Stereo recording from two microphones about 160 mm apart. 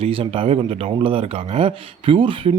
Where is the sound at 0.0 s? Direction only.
35° right (ahead or behind).